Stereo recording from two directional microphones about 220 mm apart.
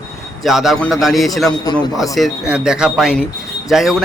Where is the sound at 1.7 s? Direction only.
15° left (ahead or behind).